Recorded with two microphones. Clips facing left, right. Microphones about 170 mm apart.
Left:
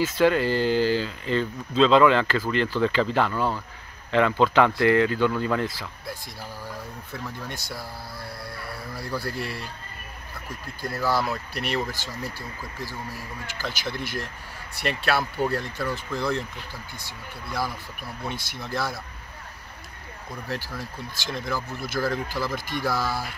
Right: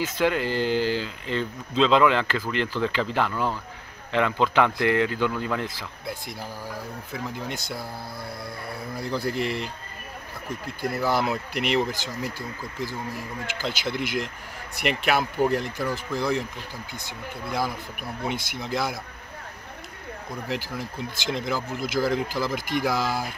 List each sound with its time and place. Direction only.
0.0 s speech: 15° right (ahead or behind)
2.8 s speech: 15° left (ahead or behind)
3.2 s speech: 10° right (ahead or behind)
4.7 s speech: 15° right (ahead or behind)
10.8 s speech: 20° right (ahead or behind)
18.2 s speech: 20° right (ahead or behind)
20.4 s speech: 15° right (ahead or behind)